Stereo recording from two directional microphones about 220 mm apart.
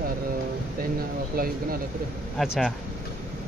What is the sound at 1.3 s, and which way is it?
Speech, 40° right (ahead or behind).